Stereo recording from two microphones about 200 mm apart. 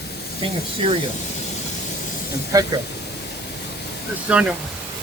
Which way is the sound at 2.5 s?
20° right (ahead or behind).